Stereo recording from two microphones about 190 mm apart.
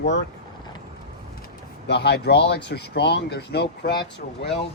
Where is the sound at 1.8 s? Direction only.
65° left (ahead or behind).